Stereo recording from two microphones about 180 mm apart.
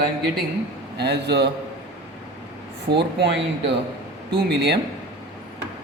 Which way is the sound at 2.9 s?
70° right (ahead or behind).